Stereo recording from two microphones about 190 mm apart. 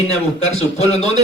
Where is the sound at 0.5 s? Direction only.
35° left (ahead or behind).